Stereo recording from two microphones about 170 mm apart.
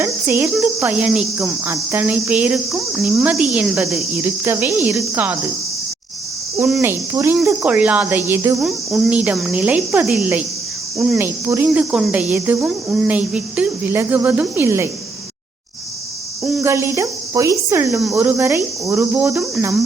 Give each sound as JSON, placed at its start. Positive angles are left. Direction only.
{"t": 0.0, "sound": "cricket", "side_deg": -15}
{"t": 0.5, "sound": "cricket", "side_deg": 0}
{"t": 1.6, "sound": "cricket", "side_deg": -15}
{"t": 4.2, "sound": "cricket", "side_deg": -15}
{"t": 6.8, "sound": "cricket", "side_deg": -15}
{"t": 8.6, "sound": "cricket", "side_deg": 0}
{"t": 16.6, "sound": "cricket", "side_deg": -15}